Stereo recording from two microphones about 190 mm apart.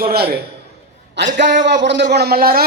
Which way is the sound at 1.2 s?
65° right (ahead or behind).